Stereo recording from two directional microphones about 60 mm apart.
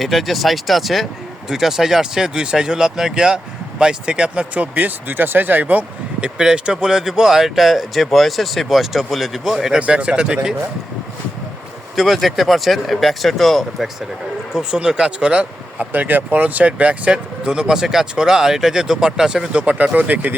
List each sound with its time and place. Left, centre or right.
0.0 s speech: centre; by 5.8 s right
6.2 s speech: centre
9.8 s speech: centre
11.9 s speech: centre
14.5 s speech: centre
15.9 s speech: right; by 19.5 s centre
19.5 s speech: right